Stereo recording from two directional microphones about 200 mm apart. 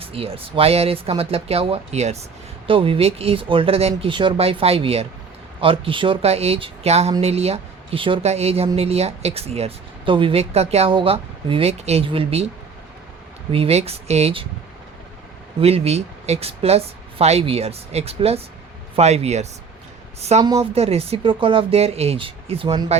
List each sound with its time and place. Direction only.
0.0 s speech: 30° right (ahead or behind)
13.5 s speech: 30° right (ahead or behind)
15.6 s speech: 30° right (ahead or behind)